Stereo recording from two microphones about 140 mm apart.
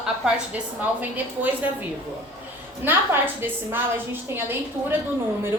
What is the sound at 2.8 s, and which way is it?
A woman's voice, 15° right (ahead or behind).